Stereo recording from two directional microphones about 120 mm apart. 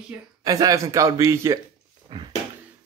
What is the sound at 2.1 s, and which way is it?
Speech, 35° right (ahead or behind).